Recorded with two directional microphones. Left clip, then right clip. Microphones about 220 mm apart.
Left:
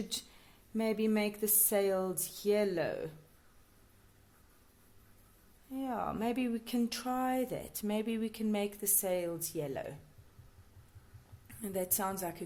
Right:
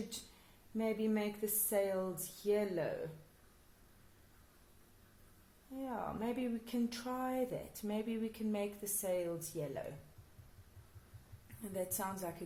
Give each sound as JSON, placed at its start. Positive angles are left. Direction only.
{"t": 0.8, "sound": "speech", "side_deg": 45}
{"t": 5.7, "sound": "speech", "side_deg": 45}
{"t": 11.6, "sound": "speech", "side_deg": 45}